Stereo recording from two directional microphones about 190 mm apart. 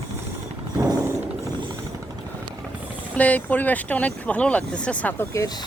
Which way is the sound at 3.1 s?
10° left (ahead or behind).